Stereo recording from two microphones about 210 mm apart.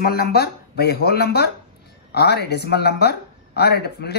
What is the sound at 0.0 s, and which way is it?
Speech, 45° left (ahead or behind).